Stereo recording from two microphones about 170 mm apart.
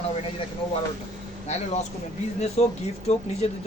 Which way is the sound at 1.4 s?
40° left (ahead or behind).